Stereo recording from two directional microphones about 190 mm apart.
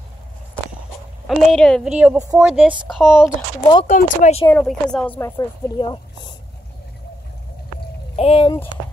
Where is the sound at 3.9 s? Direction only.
40° left (ahead or behind).